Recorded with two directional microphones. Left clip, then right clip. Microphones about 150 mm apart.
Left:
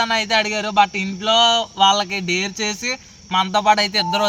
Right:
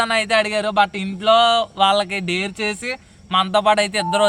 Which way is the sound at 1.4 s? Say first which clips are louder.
Even; 40° right (ahead or behind).